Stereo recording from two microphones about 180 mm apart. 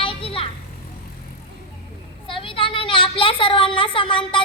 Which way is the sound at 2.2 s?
30° left (ahead or behind).